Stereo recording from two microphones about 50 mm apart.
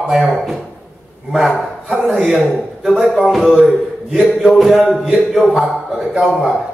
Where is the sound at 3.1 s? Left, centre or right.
Centre.